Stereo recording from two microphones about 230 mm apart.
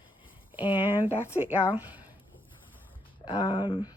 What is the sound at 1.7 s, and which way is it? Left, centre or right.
Speech, centre.